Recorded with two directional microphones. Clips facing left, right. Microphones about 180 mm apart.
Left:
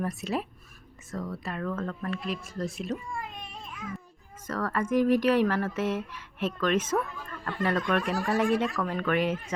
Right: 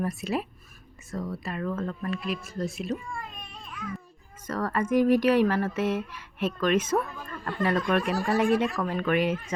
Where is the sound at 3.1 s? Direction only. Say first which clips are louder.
Left 1 dB; 20° left (ahead or behind).